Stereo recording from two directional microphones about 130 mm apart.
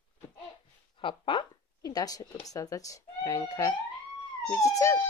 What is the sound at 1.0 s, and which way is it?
Speech, 40° left (ahead or behind).